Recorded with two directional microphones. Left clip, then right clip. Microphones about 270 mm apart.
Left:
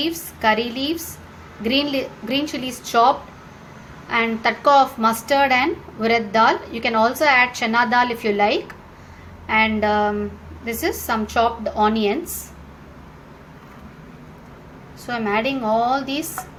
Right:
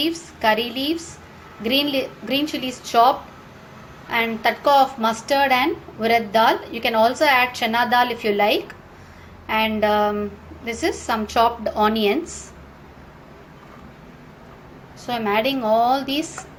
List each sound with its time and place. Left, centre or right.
0.0 s a woman's voice: centre
15.0 s a woman's voice: centre